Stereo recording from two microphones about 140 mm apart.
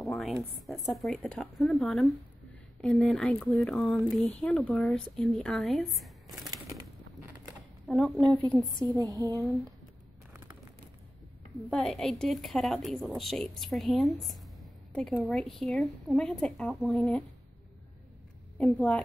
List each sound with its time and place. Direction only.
0.1 s a woman's voice: centre (ahead or behind)
7.9 s a woman's voice: centre (ahead or behind)
8.7 s a sound: 25° right (ahead or behind)
10.3 s a sound: 15° right (ahead or behind)
11.7 s a woman's voice: 5° left (ahead or behind)
18.6 s a woman's voice: 10° left (ahead or behind)